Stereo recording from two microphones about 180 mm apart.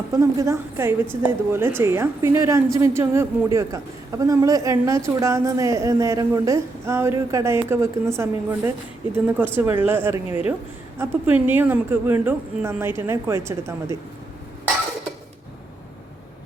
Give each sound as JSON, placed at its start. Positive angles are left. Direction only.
{"t": 0.1, "sound": "a woman's voice", "side_deg": -15}